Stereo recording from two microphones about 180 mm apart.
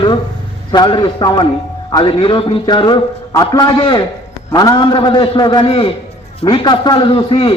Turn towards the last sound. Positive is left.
turn(degrees=30)  # may be behind; listen again after turning